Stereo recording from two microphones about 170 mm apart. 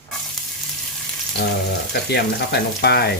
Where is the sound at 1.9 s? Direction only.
70° left (ahead or behind).